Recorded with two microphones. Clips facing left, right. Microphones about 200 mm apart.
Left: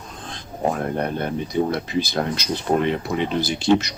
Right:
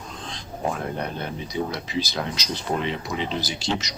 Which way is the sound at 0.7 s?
55° left (ahead or behind).